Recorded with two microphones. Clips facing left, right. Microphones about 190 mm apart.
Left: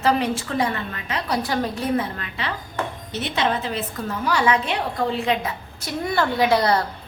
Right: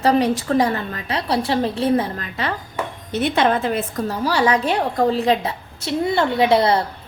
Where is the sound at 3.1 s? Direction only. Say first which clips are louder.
Right 7 dB; 55° right (ahead or behind).